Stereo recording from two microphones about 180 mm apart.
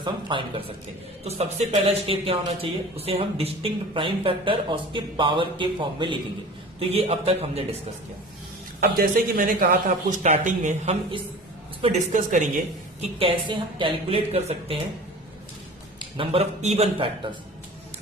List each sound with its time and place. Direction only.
0.0 s a man's voice: 25° right (ahead or behind)
8.8 s speech: 50° right (ahead or behind)
13.0 s a man's voice: 30° right (ahead or behind)
16.0 s a man's voice: 30° right (ahead or behind)